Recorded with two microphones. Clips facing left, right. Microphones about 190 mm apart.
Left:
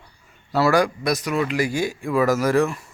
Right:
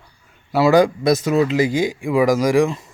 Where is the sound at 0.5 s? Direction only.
20° right (ahead or behind).